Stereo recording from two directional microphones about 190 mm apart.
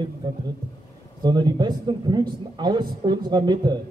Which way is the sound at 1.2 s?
20° right (ahead or behind).